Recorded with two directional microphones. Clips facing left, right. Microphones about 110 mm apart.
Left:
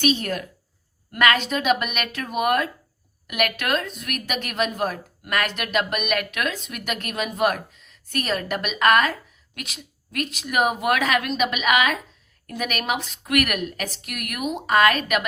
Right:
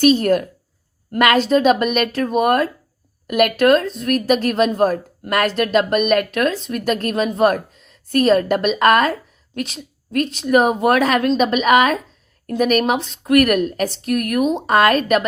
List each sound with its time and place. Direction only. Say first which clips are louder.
0.0 s a woman's voice: right 9 dB; 40° right (ahead or behind)